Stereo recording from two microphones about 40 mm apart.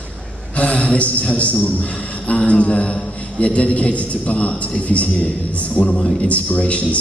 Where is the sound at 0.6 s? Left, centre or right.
Left.